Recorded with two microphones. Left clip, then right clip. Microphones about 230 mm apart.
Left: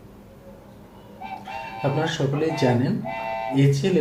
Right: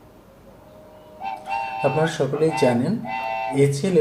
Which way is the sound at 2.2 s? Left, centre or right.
Right.